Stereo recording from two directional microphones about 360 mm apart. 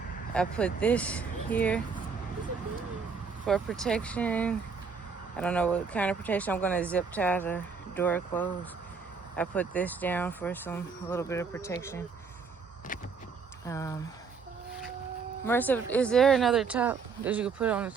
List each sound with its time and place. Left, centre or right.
0.3 s speech: centre
3.4 s speech: centre
13.7 s speech: centre
15.4 s speech: centre